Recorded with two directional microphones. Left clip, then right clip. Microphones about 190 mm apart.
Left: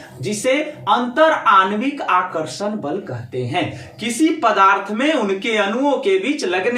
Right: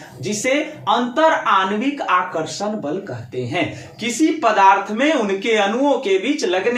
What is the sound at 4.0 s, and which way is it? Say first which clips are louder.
Speech: even; 5° left (ahead or behind).